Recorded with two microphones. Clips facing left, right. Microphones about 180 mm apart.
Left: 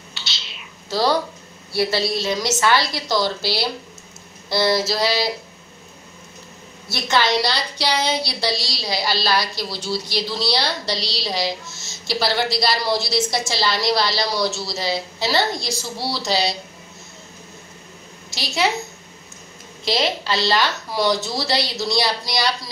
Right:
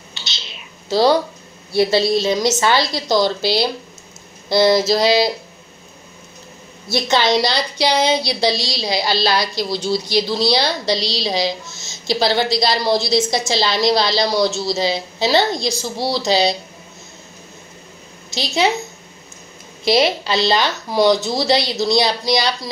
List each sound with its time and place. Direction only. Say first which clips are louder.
0.1 s whispering: right 1 dB; 20° right (ahead or behind)
1.7 s a woman's voice: right 6 dB; 20° right (ahead or behind)
7.1 s a woman's voice: right 2 dB; 15° right (ahead or behind)
18.3 s a woman's voice: right 4 dB; 20° right (ahead or behind)
19.8 s a woman's voice: right 6 dB; 15° right (ahead or behind)